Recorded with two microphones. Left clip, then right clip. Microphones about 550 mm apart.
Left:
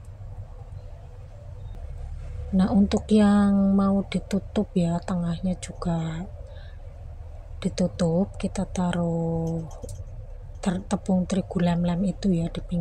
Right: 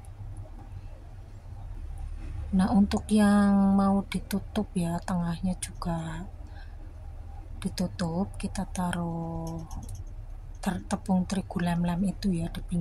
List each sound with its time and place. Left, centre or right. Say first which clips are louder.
2.5 s speech: left 3 dB; right
7.6 s a woman's voice: left 8 dB; right
10.6 s speech: left 4 dB; right